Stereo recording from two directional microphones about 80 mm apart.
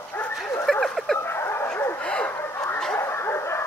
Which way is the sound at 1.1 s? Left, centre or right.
Left.